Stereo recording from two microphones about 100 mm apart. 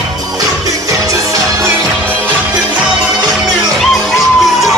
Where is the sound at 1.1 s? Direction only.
35° right (ahead or behind).